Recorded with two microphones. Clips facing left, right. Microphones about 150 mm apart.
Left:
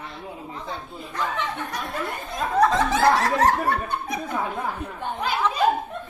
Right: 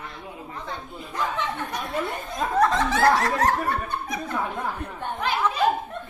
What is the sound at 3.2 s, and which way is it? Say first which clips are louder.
Snicker: left 2 dB; 30° left (ahead or behind).